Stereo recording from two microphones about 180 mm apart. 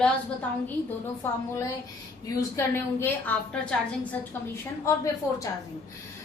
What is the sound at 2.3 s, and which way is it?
A woman's voice, 15° left (ahead or behind).